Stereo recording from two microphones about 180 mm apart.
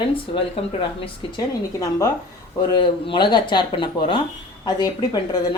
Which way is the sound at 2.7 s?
25° left (ahead or behind).